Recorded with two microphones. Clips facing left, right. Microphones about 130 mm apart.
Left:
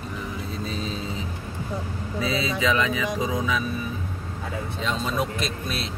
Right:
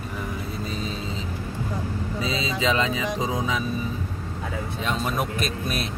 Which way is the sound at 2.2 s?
20° right (ahead or behind).